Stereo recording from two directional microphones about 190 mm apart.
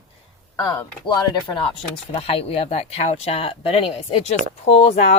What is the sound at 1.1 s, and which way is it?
Speech, 25° left (ahead or behind).